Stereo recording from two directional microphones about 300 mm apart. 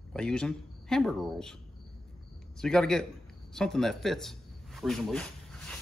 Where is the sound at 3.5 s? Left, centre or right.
Centre.